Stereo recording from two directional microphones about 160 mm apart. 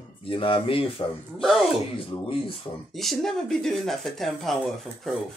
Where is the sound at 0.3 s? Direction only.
35° left (ahead or behind).